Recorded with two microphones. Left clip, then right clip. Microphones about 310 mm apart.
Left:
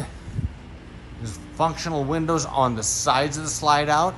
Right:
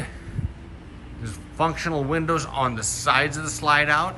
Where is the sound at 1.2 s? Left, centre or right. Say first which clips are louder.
Left 1 dB; centre.